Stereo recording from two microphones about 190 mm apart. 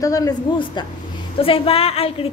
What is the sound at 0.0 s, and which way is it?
A woman's voice, 20° left (ahead or behind).